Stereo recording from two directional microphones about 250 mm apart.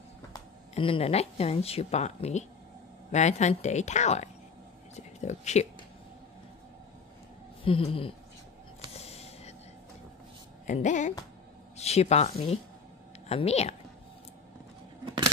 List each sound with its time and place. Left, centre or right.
0.3 s a woman's voice: left
7.6 s speech: left
8.9 s a sound: left
10.7 s a woman's voice: left